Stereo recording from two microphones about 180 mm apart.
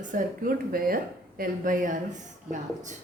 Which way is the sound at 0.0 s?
50° right (ahead or behind).